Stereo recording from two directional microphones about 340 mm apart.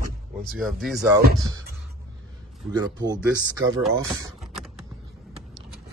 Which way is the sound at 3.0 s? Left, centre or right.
Centre.